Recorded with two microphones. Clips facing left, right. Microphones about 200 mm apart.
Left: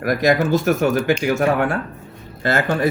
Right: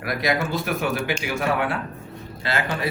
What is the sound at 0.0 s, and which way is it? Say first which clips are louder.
Speech: left 7 dB; 45° left (ahead or behind).